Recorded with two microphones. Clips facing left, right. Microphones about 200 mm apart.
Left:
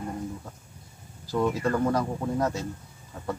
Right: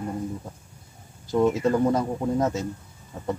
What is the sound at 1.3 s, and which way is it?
Speech, 20° right (ahead or behind).